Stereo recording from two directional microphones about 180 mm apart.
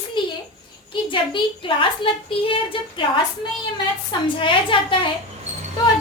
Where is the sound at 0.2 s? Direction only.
25° left (ahead or behind).